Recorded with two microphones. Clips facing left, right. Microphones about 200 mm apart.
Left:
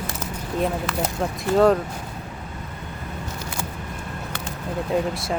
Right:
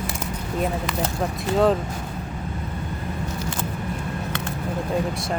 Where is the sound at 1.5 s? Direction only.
Centre (ahead or behind).